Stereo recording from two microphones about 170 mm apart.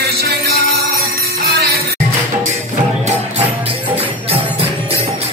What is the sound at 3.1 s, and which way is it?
Music, 40° right (ahead or behind).